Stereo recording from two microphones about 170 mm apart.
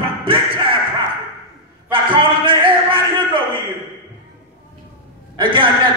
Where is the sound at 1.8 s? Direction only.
30° right (ahead or behind).